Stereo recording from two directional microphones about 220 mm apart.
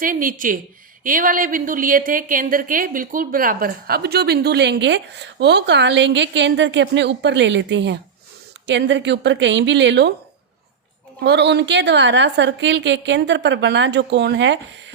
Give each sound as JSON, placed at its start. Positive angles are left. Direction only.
{"t": 0.0, "sound": "a woman's voice", "side_deg": -40}
{"t": 11.2, "sound": "a woman's voice", "side_deg": -50}